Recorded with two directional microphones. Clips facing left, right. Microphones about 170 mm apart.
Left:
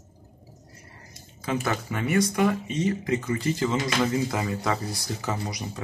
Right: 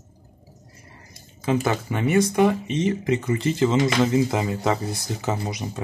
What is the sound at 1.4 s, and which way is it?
Speech, 20° right (ahead or behind).